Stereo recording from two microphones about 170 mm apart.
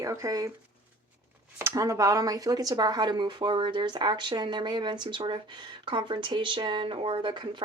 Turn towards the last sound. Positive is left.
turn(degrees=-25)  # may be behind; listen again after turning